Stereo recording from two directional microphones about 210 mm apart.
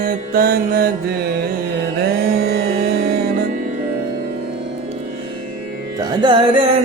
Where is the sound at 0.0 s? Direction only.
45° right (ahead or behind).